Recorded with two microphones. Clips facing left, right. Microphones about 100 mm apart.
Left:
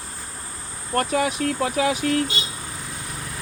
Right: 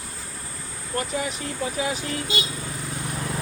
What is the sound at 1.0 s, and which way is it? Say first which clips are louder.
Speech: left 6 dB; 65° left (ahead or behind).